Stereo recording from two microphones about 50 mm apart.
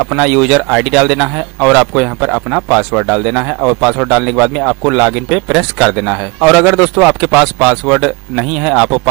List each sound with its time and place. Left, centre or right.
0.0 s speech: centre